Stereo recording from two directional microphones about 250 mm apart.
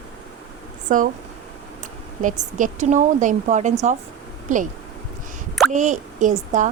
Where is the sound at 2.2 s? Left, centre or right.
Right.